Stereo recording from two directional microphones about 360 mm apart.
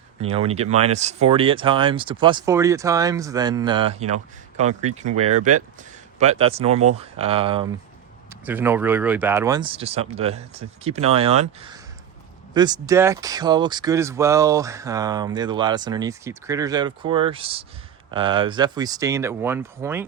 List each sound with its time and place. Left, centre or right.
0.2 s speech: centre